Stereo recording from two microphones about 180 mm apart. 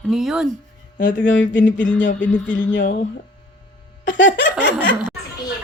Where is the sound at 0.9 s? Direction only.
45° left (ahead or behind).